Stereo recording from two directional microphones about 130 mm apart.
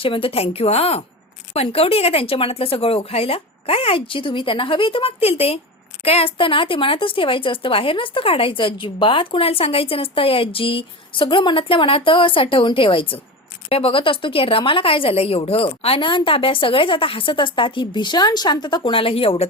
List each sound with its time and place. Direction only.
0.0 s a woman's voice: 45° left (ahead or behind)